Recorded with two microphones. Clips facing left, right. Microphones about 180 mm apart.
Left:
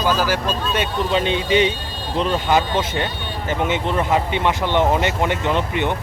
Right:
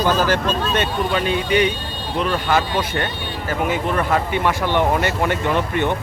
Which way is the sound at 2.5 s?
20° left (ahead or behind).